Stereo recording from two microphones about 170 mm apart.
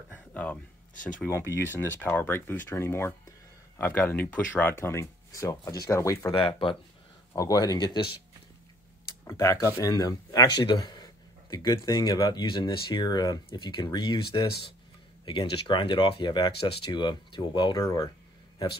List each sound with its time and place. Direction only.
0.1 s a sound: 10° left (ahead or behind)
1.2 s speech: 15° left (ahead or behind)
6.3 s speech: 30° left (ahead or behind)
7.3 s speech: 20° left (ahead or behind)
9.3 s speech: 15° left (ahead or behind)